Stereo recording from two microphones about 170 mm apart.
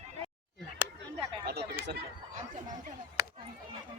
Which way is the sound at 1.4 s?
70° right (ahead or behind).